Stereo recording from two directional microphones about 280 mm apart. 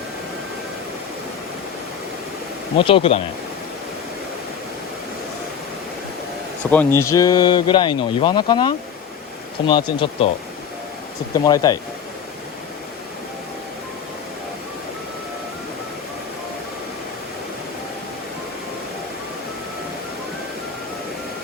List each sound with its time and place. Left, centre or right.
2.7 s speech: centre
6.6 s speech: centre
11.4 s speech: centre